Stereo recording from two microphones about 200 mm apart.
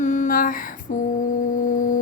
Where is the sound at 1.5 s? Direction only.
40° left (ahead or behind).